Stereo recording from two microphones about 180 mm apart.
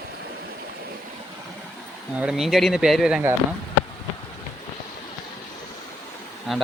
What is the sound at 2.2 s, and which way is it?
Speech, 5° right (ahead or behind).